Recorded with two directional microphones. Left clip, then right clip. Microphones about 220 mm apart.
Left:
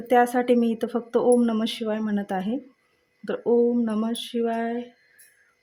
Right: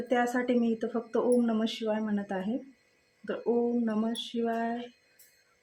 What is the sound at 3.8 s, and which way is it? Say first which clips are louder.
Speech: left 5 dB; 50° left (ahead or behind).